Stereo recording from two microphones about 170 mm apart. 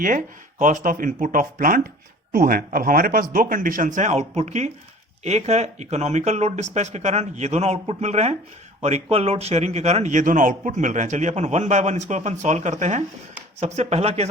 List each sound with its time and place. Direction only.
0.6 s speech: 50° right (ahead or behind)